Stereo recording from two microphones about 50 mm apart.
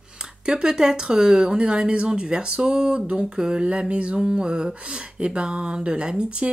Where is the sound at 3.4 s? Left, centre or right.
Centre.